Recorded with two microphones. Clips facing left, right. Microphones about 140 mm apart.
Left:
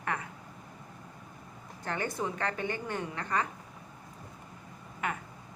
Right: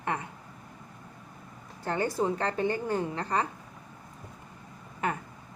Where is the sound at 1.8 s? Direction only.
30° right (ahead or behind).